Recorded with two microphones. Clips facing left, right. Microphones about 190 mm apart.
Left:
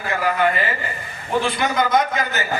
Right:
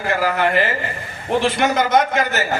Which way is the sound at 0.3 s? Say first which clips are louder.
Right 2 dB; 70° right (ahead or behind).